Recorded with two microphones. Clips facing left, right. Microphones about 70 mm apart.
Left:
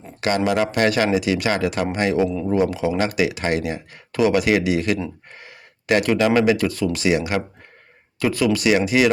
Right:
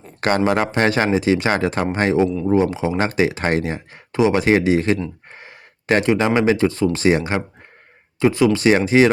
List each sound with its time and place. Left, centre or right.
0.2 s speech: right